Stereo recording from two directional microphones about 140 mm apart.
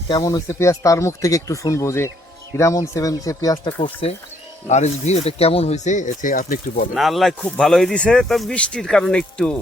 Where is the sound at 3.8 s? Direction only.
40° left (ahead or behind).